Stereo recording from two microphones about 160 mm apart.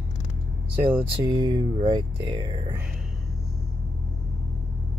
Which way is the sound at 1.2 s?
25° right (ahead or behind).